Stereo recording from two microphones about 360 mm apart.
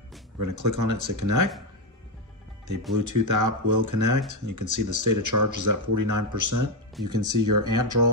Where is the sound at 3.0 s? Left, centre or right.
Right.